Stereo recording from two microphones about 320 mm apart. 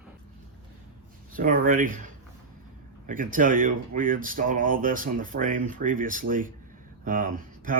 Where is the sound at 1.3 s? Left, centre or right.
Right.